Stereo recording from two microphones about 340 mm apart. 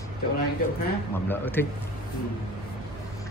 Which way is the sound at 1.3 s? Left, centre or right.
Centre.